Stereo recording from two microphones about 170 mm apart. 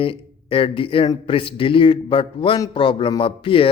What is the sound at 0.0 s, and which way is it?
A man's voice, 30° left (ahead or behind).